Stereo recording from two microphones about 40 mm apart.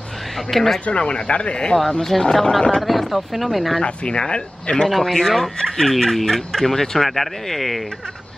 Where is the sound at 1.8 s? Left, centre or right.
Centre.